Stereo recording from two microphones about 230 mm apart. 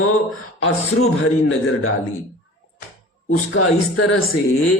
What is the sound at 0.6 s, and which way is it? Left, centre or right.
A man's voice, left.